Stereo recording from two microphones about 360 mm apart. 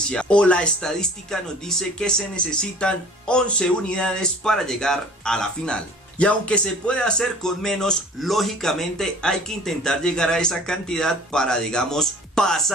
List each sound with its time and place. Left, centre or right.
0.1 s speech: centre